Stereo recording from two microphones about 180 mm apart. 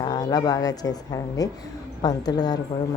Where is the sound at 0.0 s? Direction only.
20° left (ahead or behind).